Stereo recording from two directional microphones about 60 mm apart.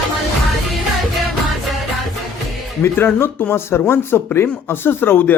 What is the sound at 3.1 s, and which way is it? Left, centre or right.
Speech, left.